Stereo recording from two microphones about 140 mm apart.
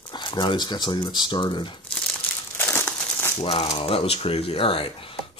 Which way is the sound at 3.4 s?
45° left (ahead or behind).